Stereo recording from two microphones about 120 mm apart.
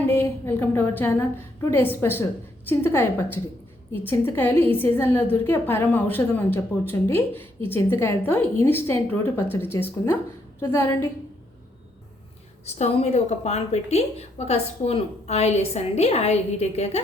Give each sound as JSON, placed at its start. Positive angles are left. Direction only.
{"t": 0.1, "sound": "a woman's voice", "side_deg": 20}
{"t": 12.6, "sound": "a woman's voice", "side_deg": 65}